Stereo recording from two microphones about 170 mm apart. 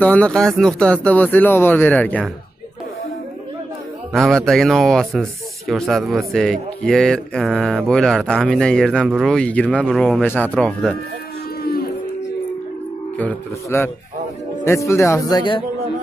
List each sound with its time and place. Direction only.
0.0 s speech: 5° left (ahead or behind)
4.1 s speech: centre (ahead or behind)
11.6 s music: 65° left (ahead or behind)
13.2 s speech: 10° left (ahead or behind)